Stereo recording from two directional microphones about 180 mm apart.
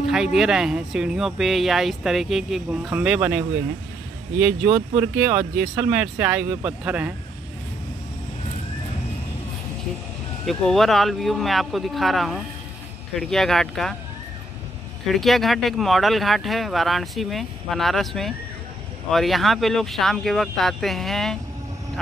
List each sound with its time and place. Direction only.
0.0 s speech: centre (ahead or behind)
10.4 s speech: centre (ahead or behind)
15.0 s speech: centre (ahead or behind)